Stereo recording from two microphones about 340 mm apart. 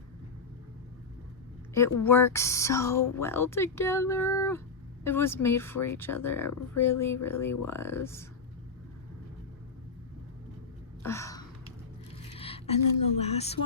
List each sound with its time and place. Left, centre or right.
1.7 s speech: centre
11.0 s gasp: centre
12.3 s music: centre
13.1 s speech: centre